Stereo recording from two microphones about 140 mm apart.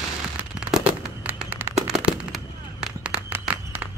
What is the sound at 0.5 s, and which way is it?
Fireworks, 5° right (ahead or behind).